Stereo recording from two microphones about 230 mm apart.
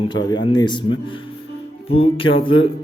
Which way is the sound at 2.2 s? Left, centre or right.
Left.